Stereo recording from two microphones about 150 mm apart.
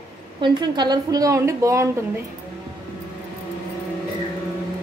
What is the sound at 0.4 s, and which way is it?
Speech, 30° right (ahead or behind).